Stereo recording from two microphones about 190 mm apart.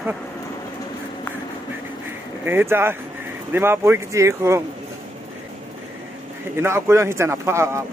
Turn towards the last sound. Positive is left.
turn(degrees=-15)  # may be behind; listen again after turning